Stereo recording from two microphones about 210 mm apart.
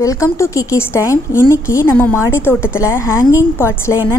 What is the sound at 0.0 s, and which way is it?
A woman's voice, 15° left (ahead or behind).